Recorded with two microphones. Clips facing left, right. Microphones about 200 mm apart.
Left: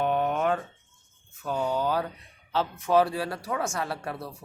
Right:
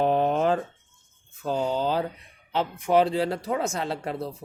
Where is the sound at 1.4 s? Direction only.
30° right (ahead or behind).